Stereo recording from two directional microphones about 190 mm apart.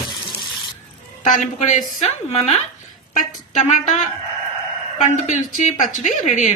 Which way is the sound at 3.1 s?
40° left (ahead or behind).